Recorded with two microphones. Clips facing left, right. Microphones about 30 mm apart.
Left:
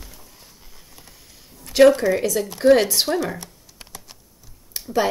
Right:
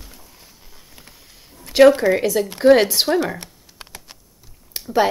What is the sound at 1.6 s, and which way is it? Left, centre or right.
Speech, centre.